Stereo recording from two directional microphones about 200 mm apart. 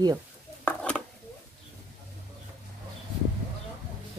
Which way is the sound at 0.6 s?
5° left (ahead or behind).